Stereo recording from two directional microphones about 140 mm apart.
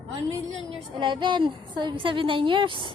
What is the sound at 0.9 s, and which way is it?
A woman's voice, 35° right (ahead or behind).